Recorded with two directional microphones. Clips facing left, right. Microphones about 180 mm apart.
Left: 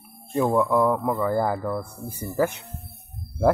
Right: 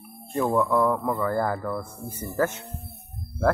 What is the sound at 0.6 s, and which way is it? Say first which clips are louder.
Speech: left 1 dB; 20° left (ahead or behind).